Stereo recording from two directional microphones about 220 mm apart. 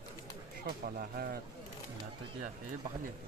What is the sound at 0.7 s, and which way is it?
Speech, 40° right (ahead or behind).